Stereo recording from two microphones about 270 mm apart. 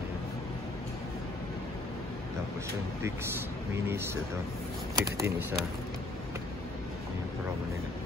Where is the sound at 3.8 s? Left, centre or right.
Centre.